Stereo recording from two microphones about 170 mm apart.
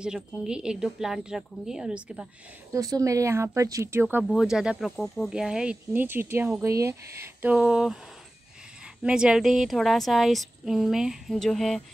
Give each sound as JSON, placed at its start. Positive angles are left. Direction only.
{"t": 0.0, "sound": "speech", "side_deg": -5}
{"t": 2.7, "sound": "speech", "side_deg": -20}
{"t": 4.2, "sound": "speech", "side_deg": -5}